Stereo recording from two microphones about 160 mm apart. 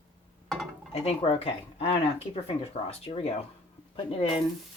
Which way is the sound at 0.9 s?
35° left (ahead or behind).